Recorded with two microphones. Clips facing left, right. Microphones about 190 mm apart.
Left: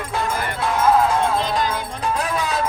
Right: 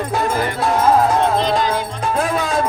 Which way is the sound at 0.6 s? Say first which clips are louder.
Right 2 dB; 45° right (ahead or behind).